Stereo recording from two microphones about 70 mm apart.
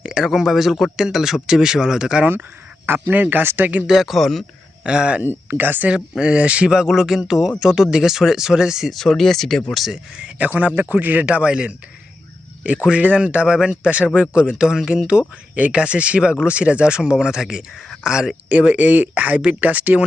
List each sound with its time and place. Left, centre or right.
0.0 s speech: centre
2.8 s a man's voice: right
3.8 s speech: centre
4.8 s speech: centre
5.5 s a man's voice: right
5.9 s speech: centre
9.0 s speech: centre
9.7 s speech: centre
10.2 s a man's voice: centre
18.4 s a man's voice: centre